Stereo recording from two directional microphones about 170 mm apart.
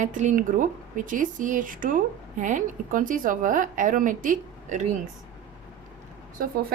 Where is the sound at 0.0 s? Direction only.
45° right (ahead or behind).